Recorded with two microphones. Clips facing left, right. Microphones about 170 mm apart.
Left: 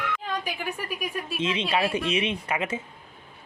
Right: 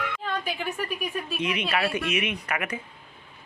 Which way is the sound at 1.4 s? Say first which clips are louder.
Left 2 dB; 25° left (ahead or behind).